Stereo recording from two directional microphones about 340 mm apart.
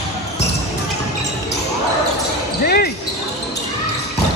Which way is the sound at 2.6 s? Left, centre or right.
Left.